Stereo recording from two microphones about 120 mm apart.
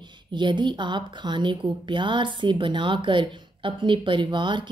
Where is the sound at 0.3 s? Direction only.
40° right (ahead or behind).